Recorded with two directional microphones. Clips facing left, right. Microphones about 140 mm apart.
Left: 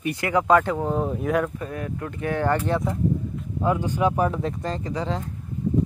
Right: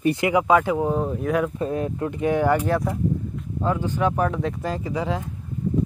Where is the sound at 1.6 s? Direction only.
25° right (ahead or behind).